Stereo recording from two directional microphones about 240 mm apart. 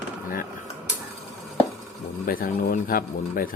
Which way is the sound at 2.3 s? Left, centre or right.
Left.